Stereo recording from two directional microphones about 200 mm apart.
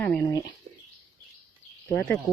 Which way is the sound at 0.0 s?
5° left (ahead or behind).